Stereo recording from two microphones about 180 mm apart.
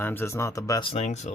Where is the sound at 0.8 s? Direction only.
35° left (ahead or behind).